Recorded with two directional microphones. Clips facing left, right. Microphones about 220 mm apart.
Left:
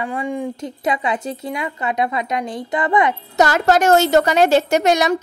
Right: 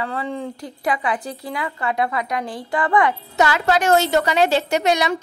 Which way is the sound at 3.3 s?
45° left (ahead or behind).